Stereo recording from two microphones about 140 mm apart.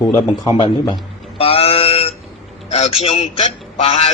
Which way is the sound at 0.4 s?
40° left (ahead or behind).